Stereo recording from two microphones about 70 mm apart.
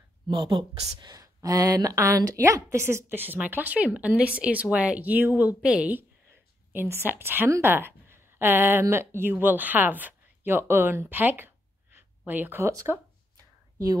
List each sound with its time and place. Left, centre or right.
0.3 s speech: right; by 5.9 s centre
6.7 s speech: right